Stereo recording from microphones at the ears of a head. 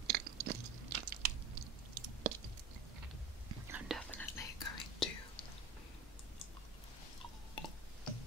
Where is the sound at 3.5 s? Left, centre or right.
Right.